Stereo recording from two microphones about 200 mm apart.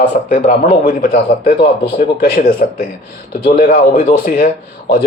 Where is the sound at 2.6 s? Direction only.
40° left (ahead or behind).